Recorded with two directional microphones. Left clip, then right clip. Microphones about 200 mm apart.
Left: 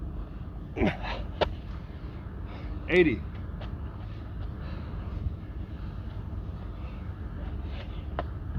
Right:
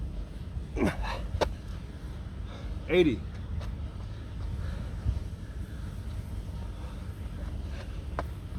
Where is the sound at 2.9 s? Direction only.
10° right (ahead or behind).